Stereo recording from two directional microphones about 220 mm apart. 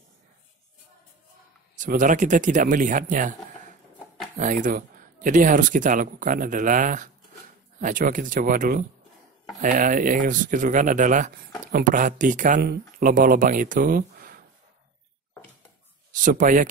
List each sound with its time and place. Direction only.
1.8 s speech: 35° right (ahead or behind)
4.4 s speech: 35° right (ahead or behind)
16.3 s speech: 35° right (ahead or behind)